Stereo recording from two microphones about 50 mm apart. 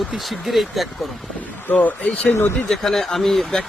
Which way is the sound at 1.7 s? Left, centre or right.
Left.